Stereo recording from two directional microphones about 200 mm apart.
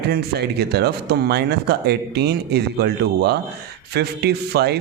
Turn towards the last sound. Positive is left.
turn(degrees=-55)  # may be behind; listen again after turning